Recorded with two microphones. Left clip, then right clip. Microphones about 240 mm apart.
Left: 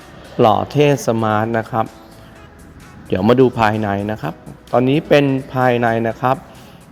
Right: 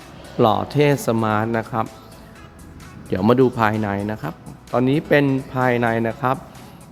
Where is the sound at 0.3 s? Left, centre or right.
Centre.